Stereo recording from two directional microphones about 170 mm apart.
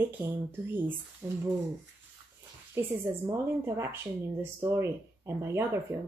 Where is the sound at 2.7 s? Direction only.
15° right (ahead or behind).